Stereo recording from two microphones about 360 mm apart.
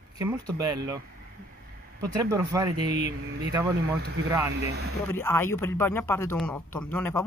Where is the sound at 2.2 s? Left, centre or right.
Centre.